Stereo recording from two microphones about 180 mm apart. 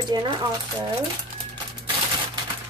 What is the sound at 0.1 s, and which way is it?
Speech, 25° right (ahead or behind).